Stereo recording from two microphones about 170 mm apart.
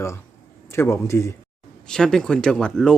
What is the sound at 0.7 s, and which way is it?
Speech, 15° left (ahead or behind).